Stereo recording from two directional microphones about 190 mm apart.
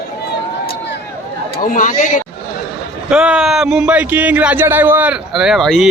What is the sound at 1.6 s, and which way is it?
Speech, 45° left (ahead or behind).